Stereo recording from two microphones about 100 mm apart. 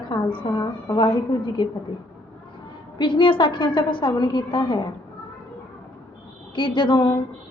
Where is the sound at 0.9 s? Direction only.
55° left (ahead or behind).